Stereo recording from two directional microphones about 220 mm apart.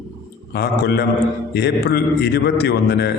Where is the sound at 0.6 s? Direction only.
45° left (ahead or behind).